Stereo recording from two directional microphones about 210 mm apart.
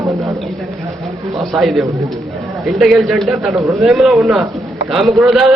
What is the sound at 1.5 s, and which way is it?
A man's voice, centre (ahead or behind).